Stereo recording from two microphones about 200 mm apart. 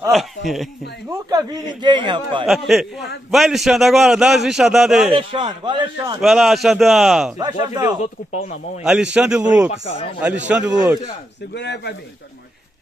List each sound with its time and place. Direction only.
0.1 s a man's voice: centre (ahead or behind)
1.1 s a man's voice: 20° right (ahead or behind)
2.4 s a man's voice: centre (ahead or behind)
5.1 s a man's voice: 25° right (ahead or behind)
6.2 s a man's voice: centre (ahead or behind)
7.3 s a man's voice: 20° right (ahead or behind)
8.0 s speech: 35° left (ahead or behind)
9.1 s a man's voice: 5° right (ahead or behind)
9.7 s speech: 30° left (ahead or behind)
10.2 s a man's voice: 5° right (ahead or behind)
11.5 s speech: 60° left (ahead or behind)